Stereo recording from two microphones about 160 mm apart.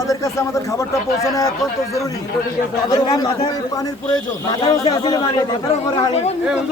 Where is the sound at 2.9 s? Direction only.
25° left (ahead or behind).